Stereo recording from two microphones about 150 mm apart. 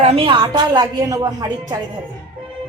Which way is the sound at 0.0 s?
40° right (ahead or behind).